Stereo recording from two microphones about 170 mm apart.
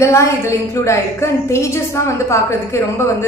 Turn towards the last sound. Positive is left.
turn(degrees=15)  # may be behind; listen again after turning